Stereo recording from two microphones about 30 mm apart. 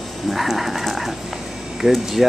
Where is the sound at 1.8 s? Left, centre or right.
Right.